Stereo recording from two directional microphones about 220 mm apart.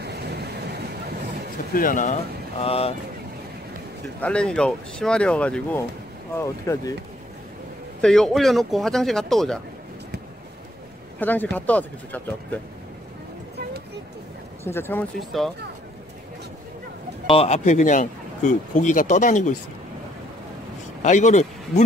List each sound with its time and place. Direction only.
0.0 s vehicle: 50° right (ahead or behind)
1.7 s speech: 40° left (ahead or behind)
2.6 s speech: 25° left (ahead or behind)
4.2 s speech: 5° left (ahead or behind)
8.0 s speech: centre (ahead or behind)
11.1 s speech: 10° left (ahead or behind)
14.6 s speech: 10° left (ahead or behind)
17.3 s speech: 30° left (ahead or behind)
21.0 s speech: 35° left (ahead or behind)